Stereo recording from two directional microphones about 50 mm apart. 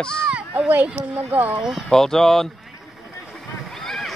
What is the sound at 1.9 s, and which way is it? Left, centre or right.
Speech, centre.